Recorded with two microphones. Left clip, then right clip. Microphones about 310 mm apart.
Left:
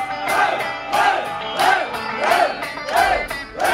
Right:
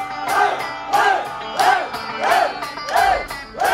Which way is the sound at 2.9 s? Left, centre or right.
Right.